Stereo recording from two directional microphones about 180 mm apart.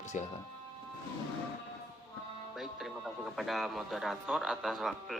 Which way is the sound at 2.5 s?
Centre (ahead or behind).